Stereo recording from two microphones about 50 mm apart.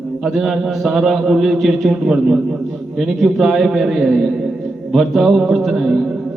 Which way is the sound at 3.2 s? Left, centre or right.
Centre.